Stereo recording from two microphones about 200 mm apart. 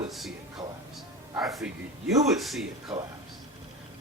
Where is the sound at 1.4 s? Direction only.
Centre (ahead or behind).